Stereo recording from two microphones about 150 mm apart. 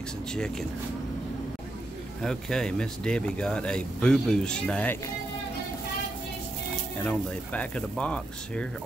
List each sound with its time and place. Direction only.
0.3 s speech: 5° left (ahead or behind)
2.2 s speech: 5° left (ahead or behind)
7.0 s speech: 10° left (ahead or behind)